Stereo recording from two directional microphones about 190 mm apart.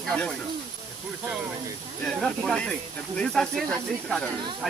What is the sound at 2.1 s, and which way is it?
Speech, centre (ahead or behind).